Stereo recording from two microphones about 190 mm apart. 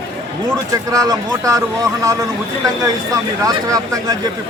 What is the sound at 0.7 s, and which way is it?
Speech, 20° right (ahead or behind).